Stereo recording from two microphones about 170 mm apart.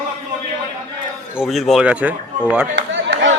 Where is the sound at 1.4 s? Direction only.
Centre (ahead or behind).